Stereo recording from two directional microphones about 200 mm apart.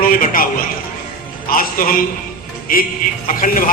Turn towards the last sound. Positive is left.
turn(degrees=45)  # may be behind; listen again after turning